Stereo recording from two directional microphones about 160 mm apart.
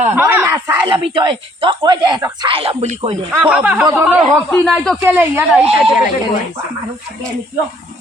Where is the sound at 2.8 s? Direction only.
45° right (ahead or behind).